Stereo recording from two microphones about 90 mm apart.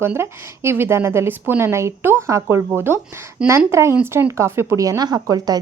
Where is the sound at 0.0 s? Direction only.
25° right (ahead or behind).